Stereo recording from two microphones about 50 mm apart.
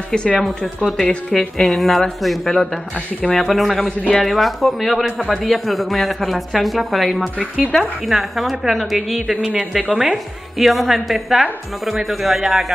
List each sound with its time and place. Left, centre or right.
0.1 s speech: centre
0.4 s speech: centre
7.7 s speech: centre
8.1 s speech: centre